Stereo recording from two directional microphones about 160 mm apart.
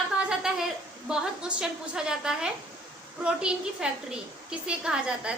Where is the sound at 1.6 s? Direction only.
5° right (ahead or behind).